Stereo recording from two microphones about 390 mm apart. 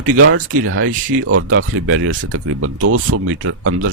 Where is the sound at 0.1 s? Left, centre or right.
Right.